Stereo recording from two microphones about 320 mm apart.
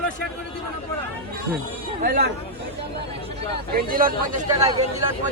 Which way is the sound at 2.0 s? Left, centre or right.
Right.